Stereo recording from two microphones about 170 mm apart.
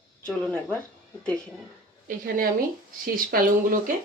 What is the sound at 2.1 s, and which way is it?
Speech, 55° right (ahead or behind).